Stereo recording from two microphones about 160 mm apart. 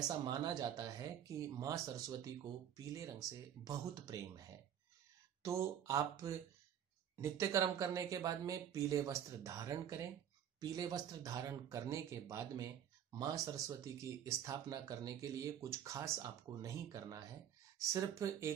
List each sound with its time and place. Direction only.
0.3 s speech: 25° right (ahead or behind)
5.4 s speech: 20° right (ahead or behind)
18.2 s speech: 20° right (ahead or behind)